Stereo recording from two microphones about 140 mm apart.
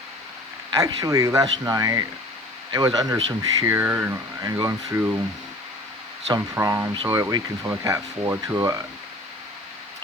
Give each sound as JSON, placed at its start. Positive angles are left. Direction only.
{"t": 0.7, "sound": "speech", "side_deg": -25}
{"t": 6.5, "sound": "speech", "side_deg": -20}